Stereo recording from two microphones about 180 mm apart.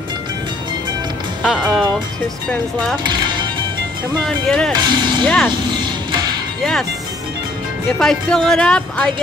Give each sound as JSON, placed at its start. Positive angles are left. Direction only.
{"t": 1.4, "sound": "speech", "side_deg": -5}
{"t": 3.1, "sound": "music", "side_deg": -25}
{"t": 4.2, "sound": "speech", "side_deg": 5}
{"t": 4.7, "sound": "speech", "side_deg": -25}
{"t": 6.6, "sound": "speech", "side_deg": 5}
{"t": 8.0, "sound": "speech", "side_deg": 5}